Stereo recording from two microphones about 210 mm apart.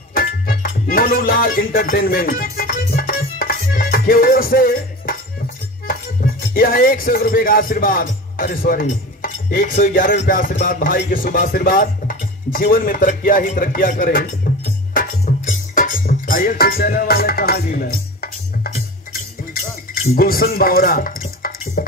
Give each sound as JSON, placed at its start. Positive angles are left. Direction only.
{"t": 0.1, "sound": "music", "side_deg": 45}
{"t": 19.9, "sound": "speech", "side_deg": 45}
{"t": 21.2, "sound": "dishes", "side_deg": 45}